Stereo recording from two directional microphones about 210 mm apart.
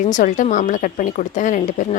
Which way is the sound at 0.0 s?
35° left (ahead or behind).